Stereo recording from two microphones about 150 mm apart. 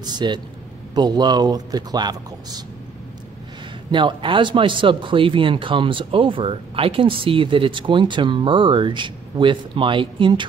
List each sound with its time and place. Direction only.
0.0 s speech: 30° right (ahead or behind)
3.9 s speech: 35° right (ahead or behind)